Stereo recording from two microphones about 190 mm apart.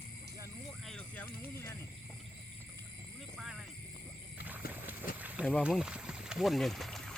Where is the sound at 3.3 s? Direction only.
Centre (ahead or behind).